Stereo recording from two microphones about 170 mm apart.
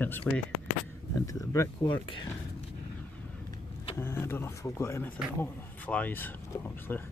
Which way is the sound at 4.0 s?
15° left (ahead or behind).